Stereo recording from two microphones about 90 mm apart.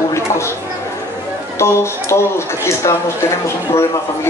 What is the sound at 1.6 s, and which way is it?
Speech, 30° left (ahead or behind).